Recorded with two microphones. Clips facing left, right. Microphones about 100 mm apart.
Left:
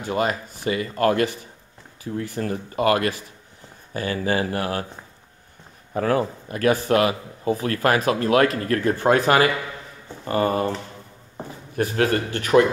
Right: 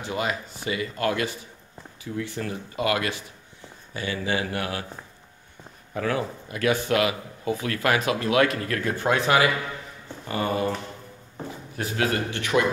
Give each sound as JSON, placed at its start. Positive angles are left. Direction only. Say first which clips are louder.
{"t": 0.0, "sound": "a man's voice", "louder": "left 5 dB", "side_deg": 45}
{"t": 5.9, "sound": "a man's voice", "louder": "left 5 dB", "side_deg": 40}
{"t": 11.7, "sound": "speech", "louder": "left 5 dB", "side_deg": 45}